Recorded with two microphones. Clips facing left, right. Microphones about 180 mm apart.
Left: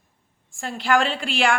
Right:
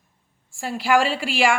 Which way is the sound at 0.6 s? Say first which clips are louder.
Right 2 dB; 5° right (ahead or behind).